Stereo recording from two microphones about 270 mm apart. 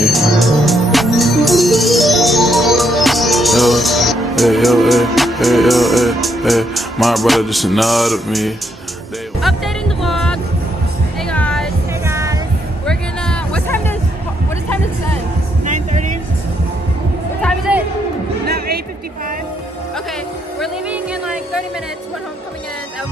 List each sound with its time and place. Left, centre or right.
0.0 s music: centre
12.0 s music: centre
12.8 s a sound: centre
15.6 s music: right
17.4 s music: centre
20.6 s music: centre